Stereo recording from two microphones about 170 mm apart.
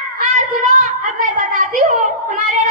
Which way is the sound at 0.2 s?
50° right (ahead or behind).